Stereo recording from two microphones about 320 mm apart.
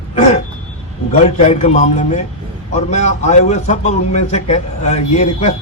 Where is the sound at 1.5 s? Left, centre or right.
Centre.